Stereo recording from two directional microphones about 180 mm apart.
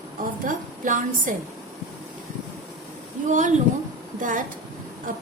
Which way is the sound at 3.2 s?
45° right (ahead or behind).